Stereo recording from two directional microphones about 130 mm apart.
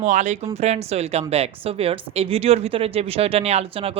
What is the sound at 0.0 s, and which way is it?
Speech, 65° right (ahead or behind).